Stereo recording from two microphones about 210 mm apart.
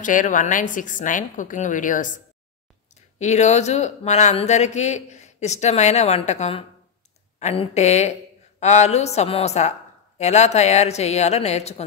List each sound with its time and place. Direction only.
0.0 s speech: 40° left (ahead or behind)
3.2 s speech: 35° left (ahead or behind)